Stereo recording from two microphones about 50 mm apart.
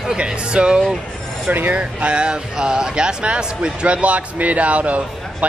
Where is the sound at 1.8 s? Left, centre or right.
Right.